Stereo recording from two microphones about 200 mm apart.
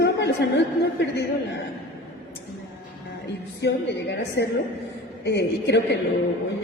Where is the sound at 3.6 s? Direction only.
55° left (ahead or behind).